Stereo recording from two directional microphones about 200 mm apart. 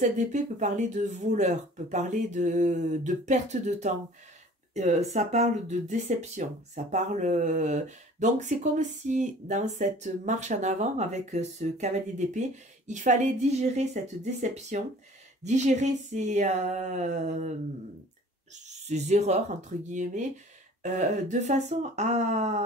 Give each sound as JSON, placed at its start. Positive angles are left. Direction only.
{"t": 0.0, "sound": "speech", "side_deg": -35}
{"t": 18.5, "sound": "speech", "side_deg": -35}